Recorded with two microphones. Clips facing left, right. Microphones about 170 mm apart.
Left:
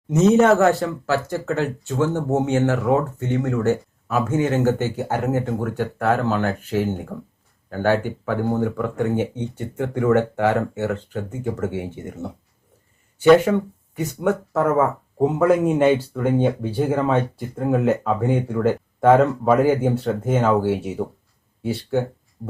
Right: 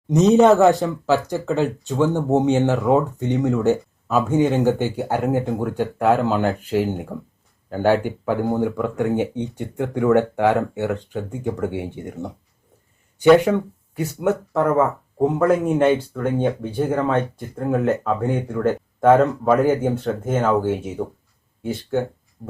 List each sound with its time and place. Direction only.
0.3 s speech: 15° right (ahead or behind)
11.7 s speech: 15° right (ahead or behind)
13.4 s speech: 10° right (ahead or behind); by 22.0 s 5° left (ahead or behind)
22.4 s a sound: centre (ahead or behind)